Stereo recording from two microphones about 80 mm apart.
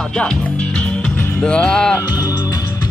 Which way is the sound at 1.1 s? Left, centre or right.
Left.